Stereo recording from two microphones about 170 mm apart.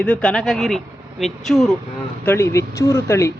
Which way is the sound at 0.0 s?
5° left (ahead or behind).